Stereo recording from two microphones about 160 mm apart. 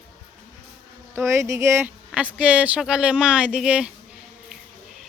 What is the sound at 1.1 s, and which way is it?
Speech, 15° right (ahead or behind).